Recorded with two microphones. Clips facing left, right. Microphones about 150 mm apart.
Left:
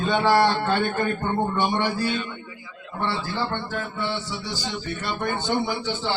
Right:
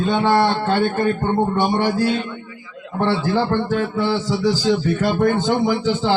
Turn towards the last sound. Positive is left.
turn(degrees=-90)